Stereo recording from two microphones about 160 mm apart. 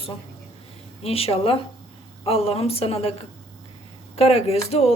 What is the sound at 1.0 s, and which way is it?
A woman's voice, 40° left (ahead or behind).